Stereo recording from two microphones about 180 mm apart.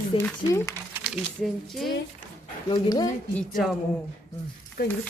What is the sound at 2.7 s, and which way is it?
Speech, 20° left (ahead or behind).